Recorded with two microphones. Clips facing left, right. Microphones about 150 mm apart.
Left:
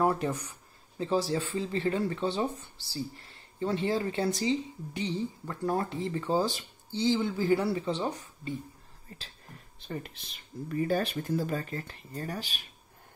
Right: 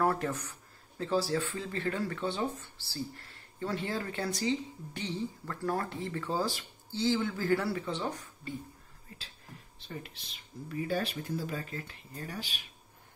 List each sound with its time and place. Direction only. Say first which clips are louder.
0.0 s speech: left 2 dB; 20° left (ahead or behind)
9.1 s speech: left 3 dB; 35° left (ahead or behind)
9.8 s speech: left 5 dB; 50° left (ahead or behind)